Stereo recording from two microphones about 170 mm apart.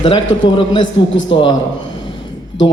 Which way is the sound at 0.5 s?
30° left (ahead or behind).